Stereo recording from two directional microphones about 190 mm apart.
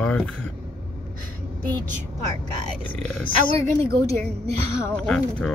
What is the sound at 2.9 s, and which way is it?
Speech, 5° left (ahead or behind).